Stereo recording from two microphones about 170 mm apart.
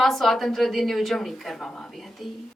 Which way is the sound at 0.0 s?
Centre (ahead or behind).